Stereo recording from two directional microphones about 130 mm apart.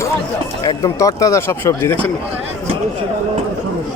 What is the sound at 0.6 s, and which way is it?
Speech, 25° left (ahead or behind).